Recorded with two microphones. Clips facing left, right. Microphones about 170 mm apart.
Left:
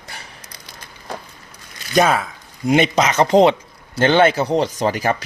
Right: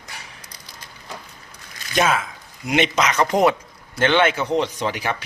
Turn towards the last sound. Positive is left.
turn(degrees=40)  # may be behind; listen again after turning